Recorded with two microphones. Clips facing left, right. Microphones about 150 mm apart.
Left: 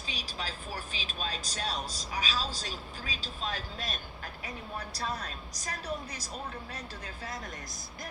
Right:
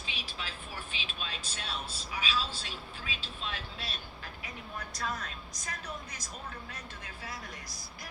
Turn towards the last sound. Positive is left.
turn(degrees=35)  # may be behind; listen again after turning